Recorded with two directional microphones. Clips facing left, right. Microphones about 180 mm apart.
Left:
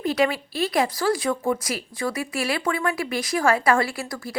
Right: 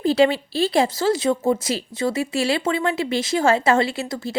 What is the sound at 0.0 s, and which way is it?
A woman's voice, 30° right (ahead or behind).